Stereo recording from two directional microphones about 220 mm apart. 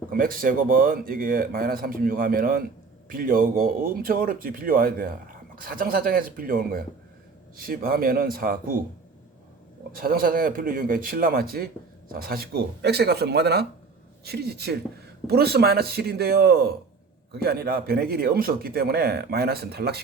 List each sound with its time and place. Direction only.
0.1 s speech: 40° right (ahead or behind)
9.9 s speech: 40° right (ahead or behind)